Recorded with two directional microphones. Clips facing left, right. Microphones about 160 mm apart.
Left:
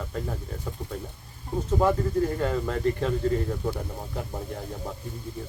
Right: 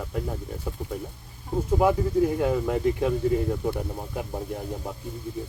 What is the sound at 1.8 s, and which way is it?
Speech, 10° right (ahead or behind).